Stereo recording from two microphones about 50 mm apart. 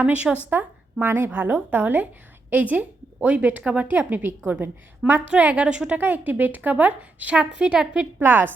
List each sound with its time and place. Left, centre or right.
0.0 s a woman's voice: right
0.5 s a woman's voice: right
1.0 s a woman's voice: right
1.3 s a woman's voice: right
3.9 s a woman's voice: right
5.2 s a woman's voice: right
5.6 s a woman's voice: centre
6.0 s a woman's voice: right
7.5 s a woman's voice: centre
8.2 s a woman's voice: right